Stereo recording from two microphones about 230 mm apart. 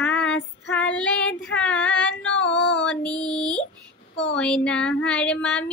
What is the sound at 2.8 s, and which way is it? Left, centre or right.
Female singing, centre.